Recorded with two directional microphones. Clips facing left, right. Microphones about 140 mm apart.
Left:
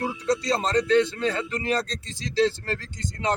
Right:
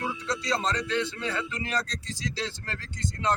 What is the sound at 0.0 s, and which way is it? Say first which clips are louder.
Speech: left 6 dB; 40° left (ahead or behind).